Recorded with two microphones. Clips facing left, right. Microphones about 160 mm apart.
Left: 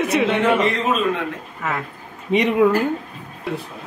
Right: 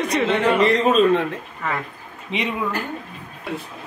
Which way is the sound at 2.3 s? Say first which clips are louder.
Left 8 dB; 45° left (ahead or behind).